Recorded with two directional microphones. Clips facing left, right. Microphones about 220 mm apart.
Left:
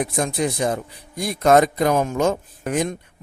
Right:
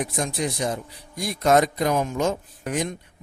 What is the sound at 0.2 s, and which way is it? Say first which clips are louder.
A man's voice: left 5 dB; 55° left (ahead or behind).